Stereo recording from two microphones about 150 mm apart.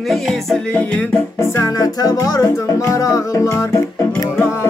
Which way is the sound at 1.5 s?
20° left (ahead or behind).